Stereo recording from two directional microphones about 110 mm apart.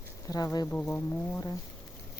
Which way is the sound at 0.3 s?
35° left (ahead or behind).